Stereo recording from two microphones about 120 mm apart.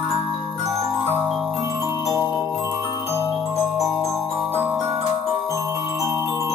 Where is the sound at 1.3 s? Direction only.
5° right (ahead or behind).